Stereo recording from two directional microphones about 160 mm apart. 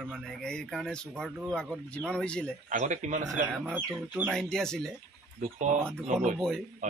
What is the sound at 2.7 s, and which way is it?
Speech, 50° right (ahead or behind).